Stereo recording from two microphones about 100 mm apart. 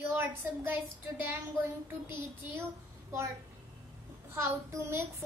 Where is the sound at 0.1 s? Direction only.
25° right (ahead or behind).